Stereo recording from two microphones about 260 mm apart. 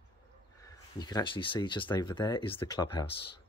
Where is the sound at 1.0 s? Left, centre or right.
Centre.